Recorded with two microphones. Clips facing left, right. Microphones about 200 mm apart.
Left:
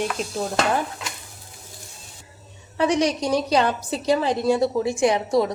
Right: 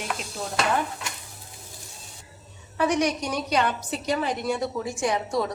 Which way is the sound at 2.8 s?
30° left (ahead or behind).